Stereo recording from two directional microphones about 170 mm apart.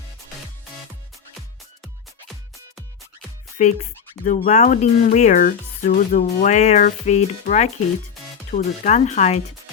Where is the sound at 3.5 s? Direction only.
45° left (ahead or behind).